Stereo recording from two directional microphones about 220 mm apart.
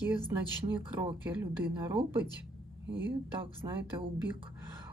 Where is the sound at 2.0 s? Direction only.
25° right (ahead or behind).